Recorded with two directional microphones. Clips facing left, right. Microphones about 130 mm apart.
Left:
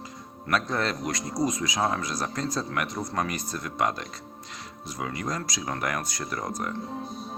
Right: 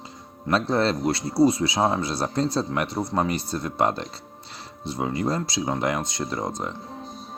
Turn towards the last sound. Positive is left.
turn(degrees=-25)  # may be behind; listen again after turning